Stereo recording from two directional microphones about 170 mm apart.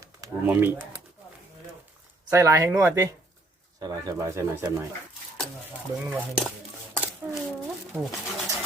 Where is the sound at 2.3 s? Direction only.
15° right (ahead or behind).